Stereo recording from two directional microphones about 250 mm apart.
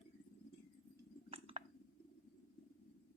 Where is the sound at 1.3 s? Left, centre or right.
Right.